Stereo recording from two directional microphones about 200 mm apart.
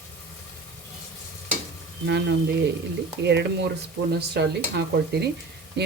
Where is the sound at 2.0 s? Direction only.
60° right (ahead or behind).